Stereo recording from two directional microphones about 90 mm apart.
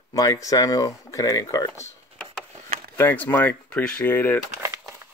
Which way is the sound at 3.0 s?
25° left (ahead or behind).